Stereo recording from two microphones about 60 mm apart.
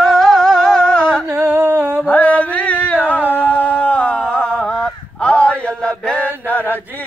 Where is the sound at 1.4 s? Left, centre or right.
Right.